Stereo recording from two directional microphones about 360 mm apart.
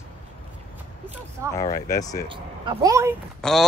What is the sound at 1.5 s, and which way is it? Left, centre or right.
Speech, centre.